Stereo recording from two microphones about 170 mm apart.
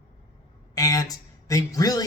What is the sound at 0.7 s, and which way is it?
Speech, 20° left (ahead or behind).